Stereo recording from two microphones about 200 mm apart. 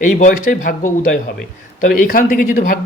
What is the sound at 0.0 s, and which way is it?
Speech, 40° left (ahead or behind).